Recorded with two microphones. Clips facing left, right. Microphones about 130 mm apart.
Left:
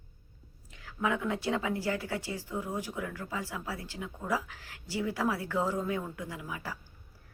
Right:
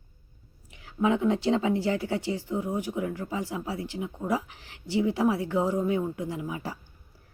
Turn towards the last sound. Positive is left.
turn(degrees=-25)  # may be behind; listen again after turning